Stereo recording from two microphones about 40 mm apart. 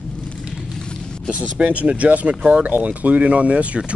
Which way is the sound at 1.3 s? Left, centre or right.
Right.